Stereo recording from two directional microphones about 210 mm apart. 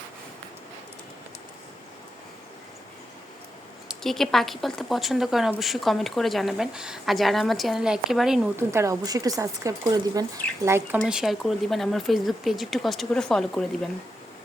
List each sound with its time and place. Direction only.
3.8 s speech: centre (ahead or behind)
8.7 s speech: 15° right (ahead or behind); by 13.9 s centre (ahead or behind)